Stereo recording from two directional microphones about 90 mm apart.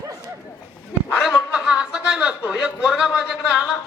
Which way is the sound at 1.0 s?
10° right (ahead or behind).